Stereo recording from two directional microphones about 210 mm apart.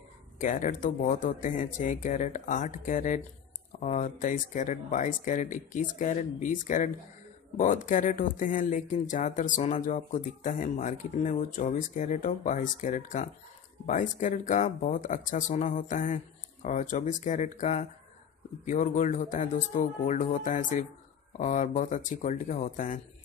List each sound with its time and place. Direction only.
0.4 s speech: 40° left (ahead or behind)